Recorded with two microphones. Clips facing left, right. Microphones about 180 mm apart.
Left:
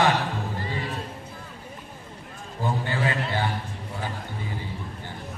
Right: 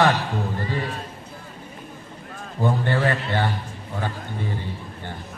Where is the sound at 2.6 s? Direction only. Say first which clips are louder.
Right 5 dB; 55° right (ahead or behind).